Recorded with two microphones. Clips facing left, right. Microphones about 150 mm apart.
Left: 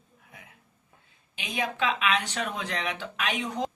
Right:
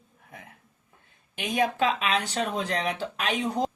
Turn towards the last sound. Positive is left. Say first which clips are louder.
# right 3 dB
turn(degrees=-35)  # may be behind; listen again after turning